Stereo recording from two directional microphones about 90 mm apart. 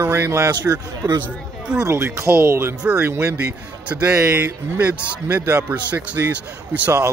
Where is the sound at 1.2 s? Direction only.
10° right (ahead or behind).